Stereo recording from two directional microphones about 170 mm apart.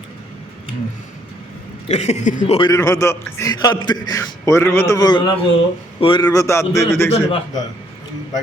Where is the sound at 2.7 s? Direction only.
20° left (ahead or behind).